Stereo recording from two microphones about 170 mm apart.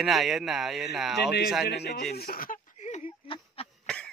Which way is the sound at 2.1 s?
60° left (ahead or behind).